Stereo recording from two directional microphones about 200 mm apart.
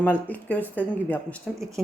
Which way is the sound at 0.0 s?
10° left (ahead or behind).